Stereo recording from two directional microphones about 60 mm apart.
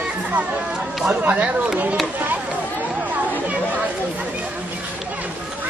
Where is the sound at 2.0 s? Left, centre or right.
Right.